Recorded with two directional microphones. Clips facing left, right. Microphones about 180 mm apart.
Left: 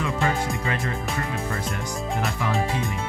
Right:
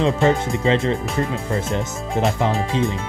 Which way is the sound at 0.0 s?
25° right (ahead or behind).